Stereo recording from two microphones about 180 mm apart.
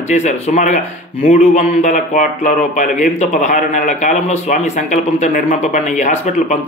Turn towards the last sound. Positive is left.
turn(degrees=40)  # may be behind; listen again after turning